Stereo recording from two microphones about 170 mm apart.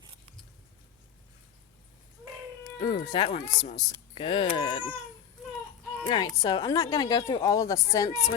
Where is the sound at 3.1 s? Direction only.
35° left (ahead or behind).